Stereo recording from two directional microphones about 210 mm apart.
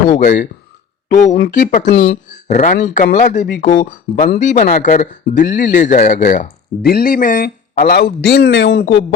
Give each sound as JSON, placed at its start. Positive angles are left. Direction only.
{"t": 0.1, "sound": "speech", "side_deg": 35}
{"t": 1.9, "sound": "speech", "side_deg": 50}
{"t": 2.3, "sound": "speech", "side_deg": 35}